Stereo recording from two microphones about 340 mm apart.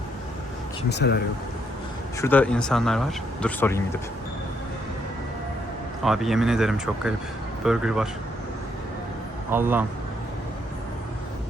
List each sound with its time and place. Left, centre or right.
0.9 s speech: left
2.2 s speech: centre
6.1 s speech: centre
9.5 s speech: centre